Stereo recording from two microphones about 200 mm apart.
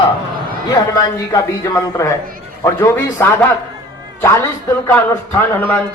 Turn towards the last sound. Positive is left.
turn(degrees=10)  # may be behind; listen again after turning